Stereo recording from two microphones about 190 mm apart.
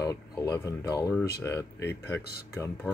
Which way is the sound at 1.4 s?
15° left (ahead or behind).